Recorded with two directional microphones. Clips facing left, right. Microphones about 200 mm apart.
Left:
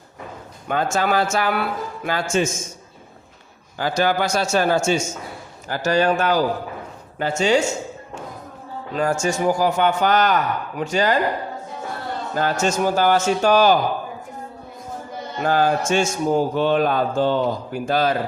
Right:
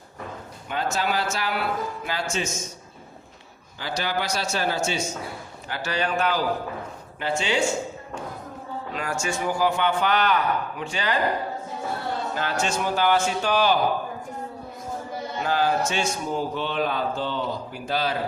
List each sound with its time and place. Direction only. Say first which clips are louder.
0.7 s a man's voice: left 6 dB; 50° left (ahead or behind)
3.8 s a man's voice: left 8 dB; 50° left (ahead or behind)
8.9 s a man's voice: left 9 dB; 40° left (ahead or behind)
12.3 s a man's voice: left 8 dB; 45° left (ahead or behind)
15.4 s a man's voice: left 4 dB; 50° left (ahead or behind)